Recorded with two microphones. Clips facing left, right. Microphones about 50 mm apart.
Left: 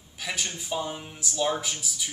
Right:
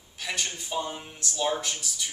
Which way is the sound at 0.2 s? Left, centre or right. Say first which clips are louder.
Even; centre.